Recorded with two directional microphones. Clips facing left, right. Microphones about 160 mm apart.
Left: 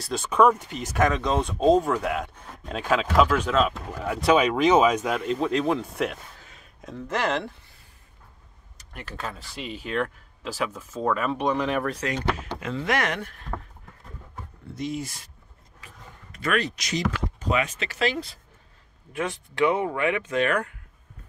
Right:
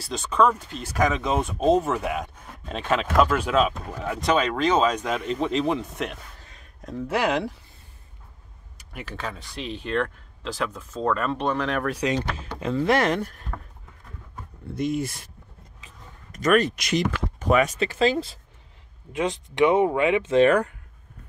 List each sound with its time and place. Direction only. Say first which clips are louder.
0.0 s speech: left 2 dB; 10° left (ahead or behind)
0.9 s speech: even; centre (ahead or behind)
4.0 s speech: left 2 dB; 5° left (ahead or behind)
7.1 s speech: right 2 dB; 10° right (ahead or behind)
8.7 s speech: right 2 dB; centre (ahead or behind)
12.0 s speech: right 5 dB; 15° right (ahead or behind)
12.5 s speech: right 9 dB; 30° right (ahead or behind)
14.8 s speech: right 5 dB; 55° right (ahead or behind)
16.3 s speech: right 6 dB; 40° right (ahead or behind)
19.1 s speech: right 4 dB; 20° right (ahead or behind)